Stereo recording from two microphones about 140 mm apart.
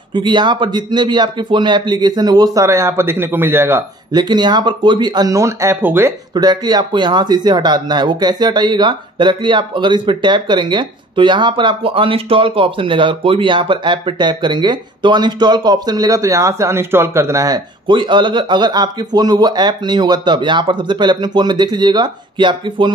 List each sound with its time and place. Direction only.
0.1 s speech: 35° right (ahead or behind); by 3.8 s 15° right (ahead or behind)
4.1 s speech: 30° right (ahead or behind); by 6.1 s 15° right (ahead or behind)
6.3 s speech: 30° right (ahead or behind)
17.8 s speech: 35° right (ahead or behind)